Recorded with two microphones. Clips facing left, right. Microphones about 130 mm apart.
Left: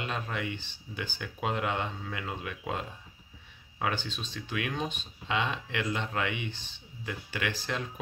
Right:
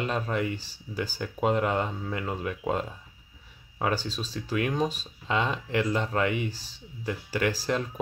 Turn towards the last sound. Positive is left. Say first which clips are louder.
# right 6 dB
turn(degrees=-35)  # may be behind; listen again after turning